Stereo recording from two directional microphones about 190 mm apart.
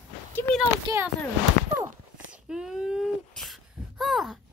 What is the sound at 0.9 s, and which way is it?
Speech, 20° right (ahead or behind).